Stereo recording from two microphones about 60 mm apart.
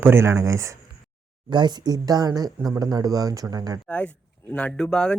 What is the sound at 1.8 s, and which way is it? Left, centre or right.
Speech, right.